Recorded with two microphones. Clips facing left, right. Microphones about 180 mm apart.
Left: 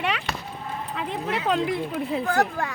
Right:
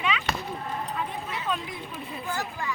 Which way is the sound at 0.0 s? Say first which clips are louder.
Left 2 dB; 65° left (ahead or behind).